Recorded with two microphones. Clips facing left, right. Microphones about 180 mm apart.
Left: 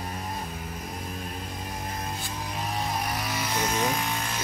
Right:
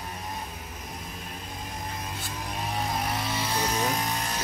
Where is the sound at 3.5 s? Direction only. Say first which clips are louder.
Left 1 dB; 35° right (ahead or behind).